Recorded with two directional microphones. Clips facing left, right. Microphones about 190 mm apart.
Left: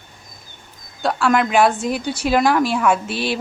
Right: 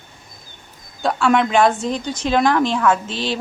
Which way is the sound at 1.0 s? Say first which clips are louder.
Right 1 dB; centre (ahead or behind).